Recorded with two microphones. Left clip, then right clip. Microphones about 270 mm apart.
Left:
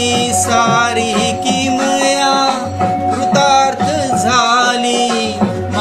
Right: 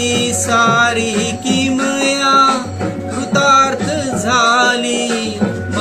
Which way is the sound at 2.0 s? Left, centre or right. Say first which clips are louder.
Right 4 dB; centre.